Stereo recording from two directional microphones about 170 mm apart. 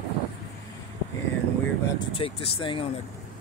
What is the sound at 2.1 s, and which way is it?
Speech, 35° left (ahead or behind).